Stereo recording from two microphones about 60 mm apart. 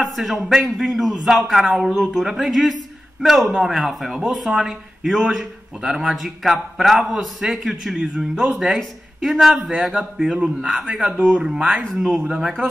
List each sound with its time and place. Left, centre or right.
0.0 s a man's voice: centre